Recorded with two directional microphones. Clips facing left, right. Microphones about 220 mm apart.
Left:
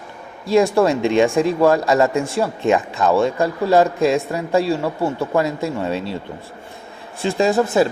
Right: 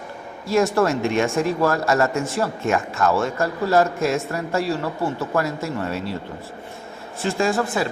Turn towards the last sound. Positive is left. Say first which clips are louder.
# left 5 dB
turn(degrees=20)  # may be behind; listen again after turning